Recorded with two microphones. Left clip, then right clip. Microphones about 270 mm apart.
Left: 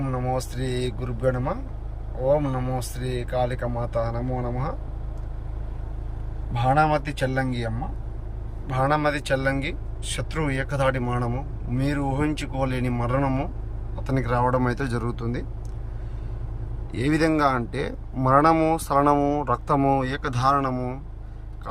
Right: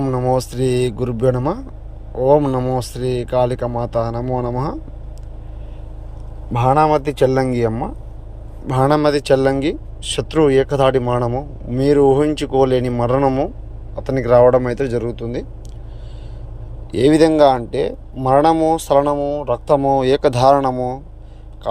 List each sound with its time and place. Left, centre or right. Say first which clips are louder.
0.0 s speech: right 10 dB; right
6.6 s speech: right 7 dB; centre
16.9 s speech: right 10 dB; centre
20.7 s speech: right 9 dB; centre